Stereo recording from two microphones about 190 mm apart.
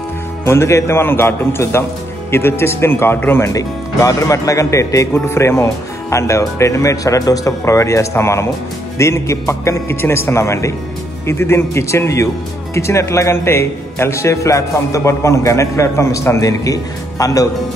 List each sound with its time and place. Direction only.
0.5 s speech: 15° left (ahead or behind)